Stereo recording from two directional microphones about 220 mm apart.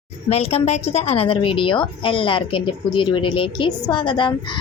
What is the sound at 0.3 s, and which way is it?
A woman's voice, 30° left (ahead or behind).